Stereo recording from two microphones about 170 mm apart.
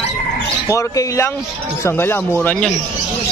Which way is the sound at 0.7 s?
15° left (ahead or behind).